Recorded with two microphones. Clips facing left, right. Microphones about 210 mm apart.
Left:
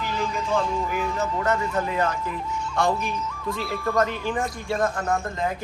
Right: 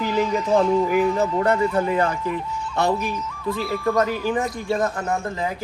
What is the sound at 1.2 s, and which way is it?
Speech, 30° right (ahead or behind).